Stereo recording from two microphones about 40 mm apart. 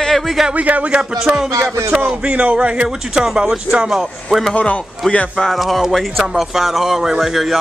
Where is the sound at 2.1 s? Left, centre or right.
Right; by 3.9 s centre.